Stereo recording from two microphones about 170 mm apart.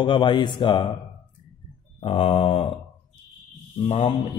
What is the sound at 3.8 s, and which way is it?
Mantra, 30° left (ahead or behind).